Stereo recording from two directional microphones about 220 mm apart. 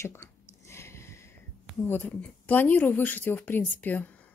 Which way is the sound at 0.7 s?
10° left (ahead or behind).